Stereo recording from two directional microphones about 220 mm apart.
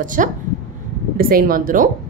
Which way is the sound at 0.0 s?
35° right (ahead or behind).